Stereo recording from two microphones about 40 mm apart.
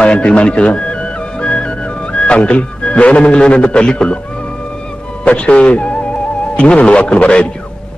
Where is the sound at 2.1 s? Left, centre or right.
Left.